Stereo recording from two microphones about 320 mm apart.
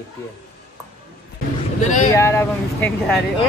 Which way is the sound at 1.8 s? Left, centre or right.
Left.